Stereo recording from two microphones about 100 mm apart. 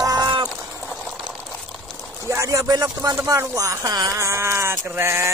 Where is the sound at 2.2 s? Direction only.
30° right (ahead or behind).